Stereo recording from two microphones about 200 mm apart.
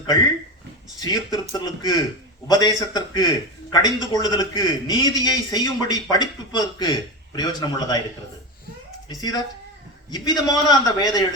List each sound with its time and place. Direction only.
0.9 s a man's voice: 20° left (ahead or behind)
9.0 s a man's voice: 20° left (ahead or behind)